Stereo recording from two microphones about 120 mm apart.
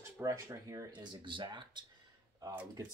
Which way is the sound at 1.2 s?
40° right (ahead or behind).